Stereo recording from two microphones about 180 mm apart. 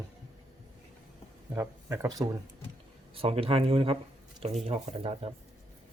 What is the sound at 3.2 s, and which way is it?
Speech, 35° right (ahead or behind).